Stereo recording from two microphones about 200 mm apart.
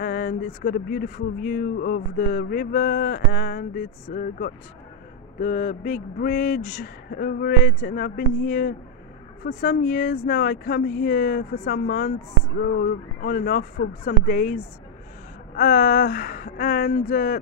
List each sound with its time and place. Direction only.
0.0 s speech: 45° left (ahead or behind)